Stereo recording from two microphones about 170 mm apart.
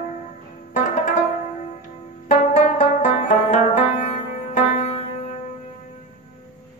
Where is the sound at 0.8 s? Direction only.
50° left (ahead or behind).